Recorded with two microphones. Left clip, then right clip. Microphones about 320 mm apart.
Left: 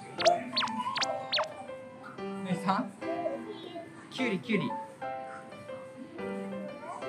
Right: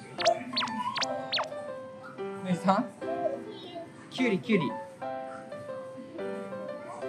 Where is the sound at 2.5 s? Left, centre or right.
Centre.